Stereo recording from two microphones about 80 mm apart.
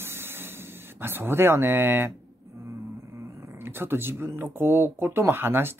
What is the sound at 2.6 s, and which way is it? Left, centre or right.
Speech, right.